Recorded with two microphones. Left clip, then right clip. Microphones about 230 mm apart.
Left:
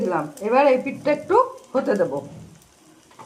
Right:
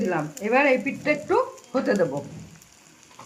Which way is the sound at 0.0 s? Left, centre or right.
Right.